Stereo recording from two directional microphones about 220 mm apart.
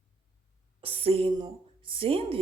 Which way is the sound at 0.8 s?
25° right (ahead or behind).